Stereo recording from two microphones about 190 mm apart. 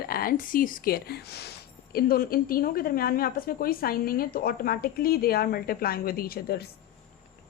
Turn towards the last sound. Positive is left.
turn(degrees=55)  # may be behind; listen again after turning